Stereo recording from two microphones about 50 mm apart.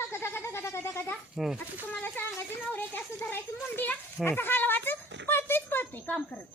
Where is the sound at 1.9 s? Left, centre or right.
Left.